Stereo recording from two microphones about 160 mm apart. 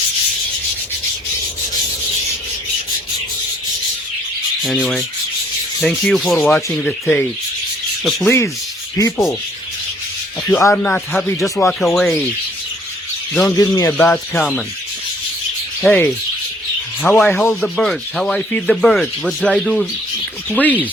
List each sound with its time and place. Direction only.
4.6 s speech: centre (ahead or behind)
6.1 s speech: centre (ahead or behind)
9.0 s speech: 15° left (ahead or behind)
10.5 s speech: 15° left (ahead or behind)
13.3 s speech: centre (ahead or behind)
13.6 s speech: 20° left (ahead or behind)
14.0 s speech: 10° left (ahead or behind)
15.8 s speech: 5° left (ahead or behind)